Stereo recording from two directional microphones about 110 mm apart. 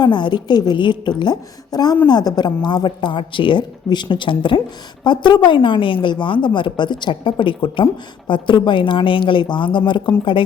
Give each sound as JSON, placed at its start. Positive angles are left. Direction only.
{"t": 0.0, "sound": "a woman's voice", "side_deg": 45}